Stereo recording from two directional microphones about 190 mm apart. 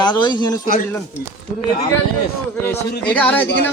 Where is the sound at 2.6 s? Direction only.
10° left (ahead or behind).